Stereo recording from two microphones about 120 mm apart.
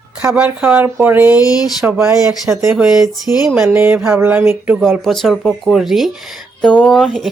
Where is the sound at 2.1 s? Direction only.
5° right (ahead or behind).